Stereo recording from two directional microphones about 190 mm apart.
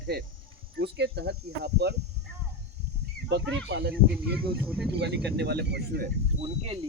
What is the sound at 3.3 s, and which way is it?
Speech, 60° right (ahead or behind).